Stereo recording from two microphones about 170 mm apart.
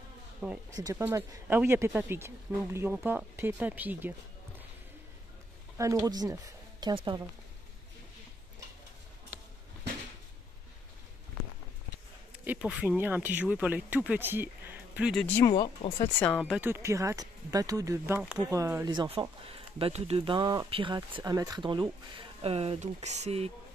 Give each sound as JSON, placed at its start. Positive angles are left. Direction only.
{"t": 0.7, "sound": "speech", "side_deg": -20}
{"t": 5.8, "sound": "speech", "side_deg": -20}
{"t": 12.4, "sound": "speech", "side_deg": -5}
{"t": 15.2, "sound": "speech", "side_deg": 10}
{"t": 15.5, "sound": "speech", "side_deg": 30}
{"t": 16.2, "sound": "speech", "side_deg": 10}
{"t": 16.5, "sound": "speech", "side_deg": -15}
{"t": 18.9, "sound": "speech", "side_deg": -35}